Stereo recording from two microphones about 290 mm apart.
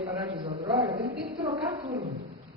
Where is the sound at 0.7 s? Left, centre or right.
Right.